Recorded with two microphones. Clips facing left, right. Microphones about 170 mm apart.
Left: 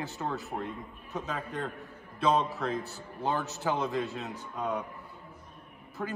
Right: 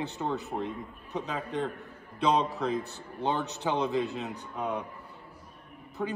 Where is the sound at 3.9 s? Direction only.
15° right (ahead or behind).